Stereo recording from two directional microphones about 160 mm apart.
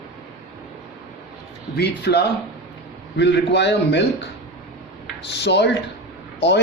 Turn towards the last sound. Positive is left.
turn(degrees=90)